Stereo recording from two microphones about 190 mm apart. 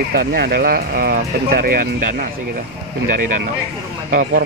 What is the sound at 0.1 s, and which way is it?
Speech, 50° right (ahead or behind).